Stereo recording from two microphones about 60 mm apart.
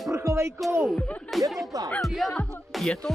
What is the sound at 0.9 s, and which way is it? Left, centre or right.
Speech, left.